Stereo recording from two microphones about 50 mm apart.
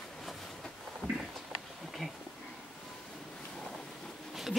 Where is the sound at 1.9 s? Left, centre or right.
Centre.